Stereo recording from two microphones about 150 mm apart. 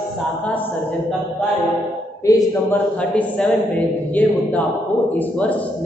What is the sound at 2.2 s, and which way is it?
Speech, 20° left (ahead or behind).